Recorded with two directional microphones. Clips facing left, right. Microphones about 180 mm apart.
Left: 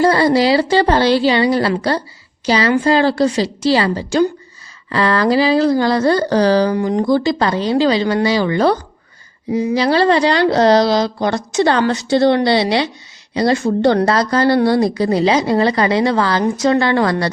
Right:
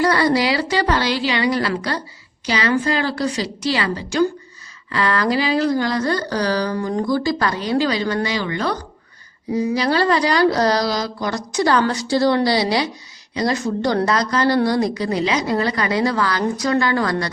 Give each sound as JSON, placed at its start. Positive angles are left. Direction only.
{"t": 0.0, "sound": "speech", "side_deg": 25}
{"t": 13.3, "sound": "a woman's voice", "side_deg": 30}